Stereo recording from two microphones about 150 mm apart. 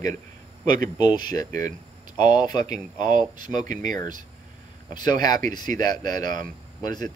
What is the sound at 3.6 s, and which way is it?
Speech, 60° right (ahead or behind).